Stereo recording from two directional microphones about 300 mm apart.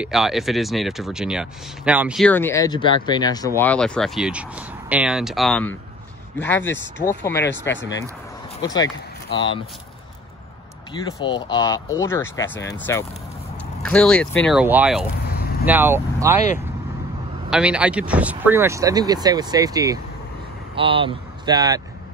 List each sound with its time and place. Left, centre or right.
0.0 s speech: centre
7.7 s speech: left
8.6 s speech: centre
10.9 s speech: centre
17.5 s speech: centre